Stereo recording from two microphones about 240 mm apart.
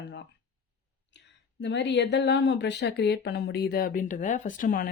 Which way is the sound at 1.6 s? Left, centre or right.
Left.